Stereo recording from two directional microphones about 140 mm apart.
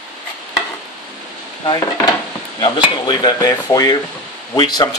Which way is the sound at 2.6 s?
30° left (ahead or behind).